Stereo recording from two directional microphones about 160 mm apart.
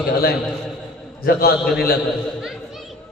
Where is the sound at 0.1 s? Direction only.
70° left (ahead or behind).